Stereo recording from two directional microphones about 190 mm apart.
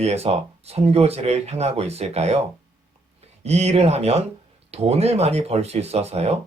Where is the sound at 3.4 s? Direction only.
35° right (ahead or behind).